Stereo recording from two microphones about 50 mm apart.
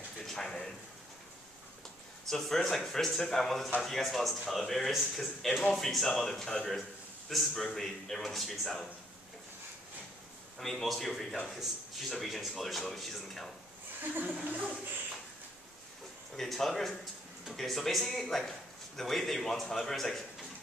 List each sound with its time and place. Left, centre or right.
0.2 s speech: centre
2.2 s a man's voice: centre
10.6 s speech: centre
14.1 s a sound: right
16.3 s a man's voice: centre